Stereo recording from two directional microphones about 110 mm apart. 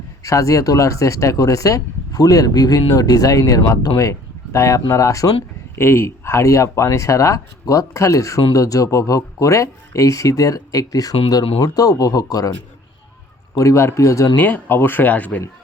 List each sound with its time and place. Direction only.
0.2 s speech: 30° left (ahead or behind)
13.6 s speech: 25° left (ahead or behind)
14.3 s speech: 15° left (ahead or behind)